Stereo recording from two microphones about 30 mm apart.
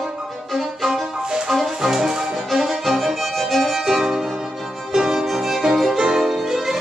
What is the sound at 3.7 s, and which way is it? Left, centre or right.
Music, centre.